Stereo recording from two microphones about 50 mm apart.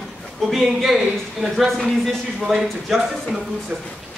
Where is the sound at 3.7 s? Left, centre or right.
Right.